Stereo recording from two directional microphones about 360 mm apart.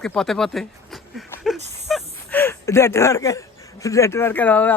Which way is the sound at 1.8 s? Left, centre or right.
Centre.